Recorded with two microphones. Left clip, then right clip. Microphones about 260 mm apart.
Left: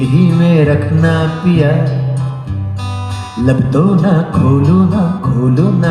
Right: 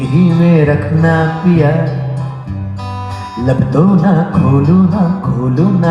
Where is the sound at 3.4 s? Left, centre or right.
Left.